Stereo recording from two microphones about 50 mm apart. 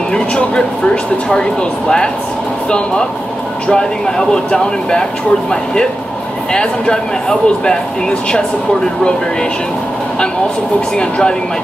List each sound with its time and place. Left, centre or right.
0.1 s speech: centre
3.6 s speech: centre
6.5 s speech: centre
11.0 s speech: centre